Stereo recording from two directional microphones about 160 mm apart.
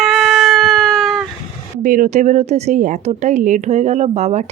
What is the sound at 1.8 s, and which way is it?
A woman's voice, 55° right (ahead or behind).